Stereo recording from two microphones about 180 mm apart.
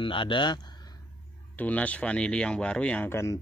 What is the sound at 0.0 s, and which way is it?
Speech, 30° left (ahead or behind).